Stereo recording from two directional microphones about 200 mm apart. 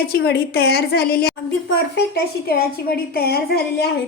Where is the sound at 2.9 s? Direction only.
50° left (ahead or behind).